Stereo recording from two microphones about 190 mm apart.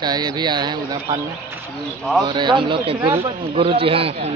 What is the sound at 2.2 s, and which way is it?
A man's voice, 25° right (ahead or behind).